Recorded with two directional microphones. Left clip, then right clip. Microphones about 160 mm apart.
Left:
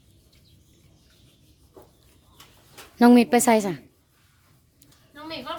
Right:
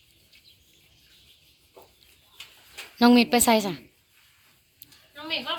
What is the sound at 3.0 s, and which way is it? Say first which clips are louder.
Speech: left 2 dB; 55° left (ahead or behind).